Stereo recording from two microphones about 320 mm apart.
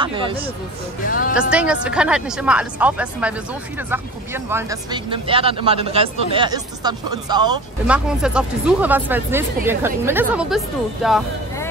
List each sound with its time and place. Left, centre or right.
0.0 s speech: centre
1.0 s speech: left
1.5 s speech: centre